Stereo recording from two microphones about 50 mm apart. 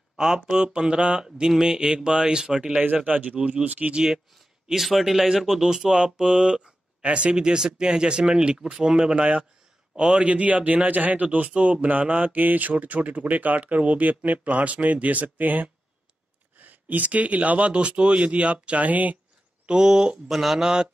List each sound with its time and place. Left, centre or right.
0.2 s speech: centre
2.8 s speech: right
4.6 s speech: centre; by 19.1 s right
19.6 s speech: centre
20.2 s speech: centre